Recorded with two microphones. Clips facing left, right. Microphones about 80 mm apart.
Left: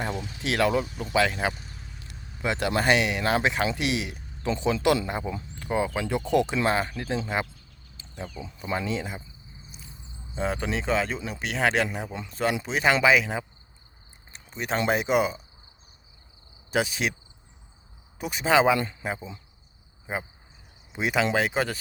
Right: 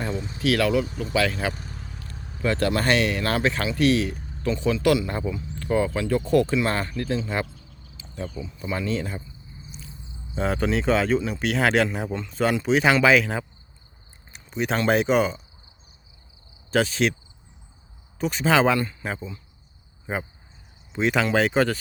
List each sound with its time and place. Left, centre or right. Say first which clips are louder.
0.2 s speech: right 2 dB; right
0.4 s speech: right 3 dB; left
1.5 s vehicle: right 6 dB; right
2.4 s speech: right 3 dB; centre
8.4 s speech: even; left
8.9 s speech: right 3 dB; centre
10.3 s speech: right 4 dB; centre
14.3 s a sound: right 4 dB; centre
14.8 s speech: right 3 dB; centre
16.7 s speech: right 4 dB; centre
18.2 s speech: right 1 dB; centre
20.1 s speech: right 3 dB; centre